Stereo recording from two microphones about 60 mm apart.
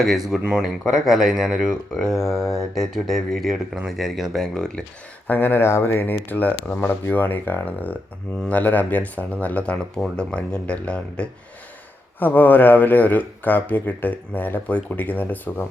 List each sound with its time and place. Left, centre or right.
0.0 s speech: centre
5.3 s speech: left
6.2 s speech: left
6.7 s speech: left; by 11.3 s centre
12.2 s speech: left